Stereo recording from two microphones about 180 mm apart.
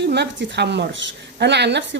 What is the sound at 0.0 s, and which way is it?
A woman's voice, 70° right (ahead or behind).